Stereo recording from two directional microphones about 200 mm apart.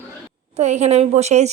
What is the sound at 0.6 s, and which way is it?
Speech, 35° right (ahead or behind).